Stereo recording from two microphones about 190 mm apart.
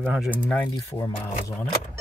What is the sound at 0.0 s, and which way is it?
Speech, 5° right (ahead or behind).